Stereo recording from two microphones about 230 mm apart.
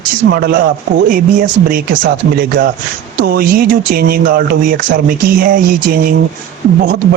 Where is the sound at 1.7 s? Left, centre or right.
Right.